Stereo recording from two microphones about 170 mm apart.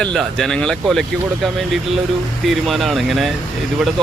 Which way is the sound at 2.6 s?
Centre (ahead or behind).